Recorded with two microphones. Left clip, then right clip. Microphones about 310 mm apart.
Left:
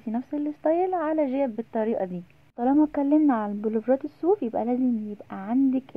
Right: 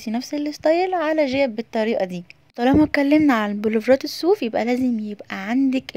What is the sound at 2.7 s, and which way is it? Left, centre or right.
A woman's voice, right.